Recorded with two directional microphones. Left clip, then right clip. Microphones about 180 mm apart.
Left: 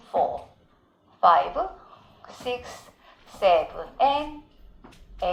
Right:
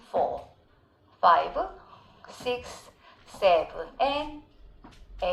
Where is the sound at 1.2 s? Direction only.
30° right (ahead or behind).